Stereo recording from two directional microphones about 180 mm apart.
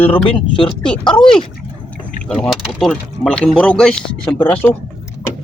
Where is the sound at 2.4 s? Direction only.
Centre (ahead or behind).